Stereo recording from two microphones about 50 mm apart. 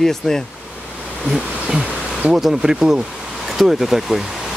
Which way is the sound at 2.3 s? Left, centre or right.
Centre.